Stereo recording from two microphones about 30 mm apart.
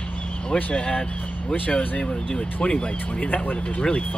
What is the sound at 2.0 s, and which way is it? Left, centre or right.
Speech, left.